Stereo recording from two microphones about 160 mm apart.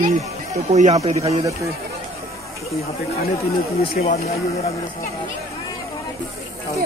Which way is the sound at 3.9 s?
50° left (ahead or behind).